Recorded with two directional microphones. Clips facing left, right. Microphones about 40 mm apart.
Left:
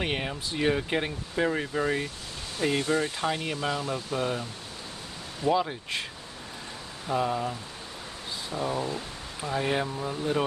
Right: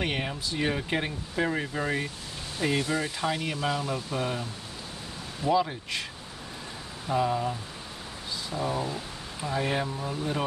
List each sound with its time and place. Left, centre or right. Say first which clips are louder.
0.0 s speech: even; centre
3.2 s speech: even; centre
3.6 s speech: right 1 dB; centre
5.4 s speech: even; left
7.1 s speech: right 1 dB; centre
8.6 s speech: left 1 dB; centre